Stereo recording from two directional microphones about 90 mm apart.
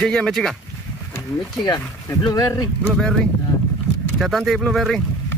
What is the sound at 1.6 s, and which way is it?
Speech, 45° left (ahead or behind).